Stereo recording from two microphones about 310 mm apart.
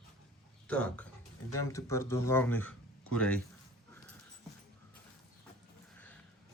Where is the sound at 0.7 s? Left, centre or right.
Centre.